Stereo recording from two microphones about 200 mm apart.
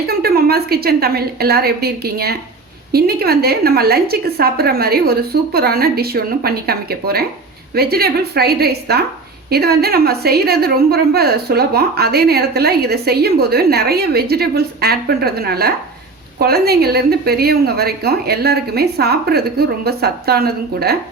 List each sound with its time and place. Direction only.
0.1 s a woman's voice: 50° right (ahead or behind)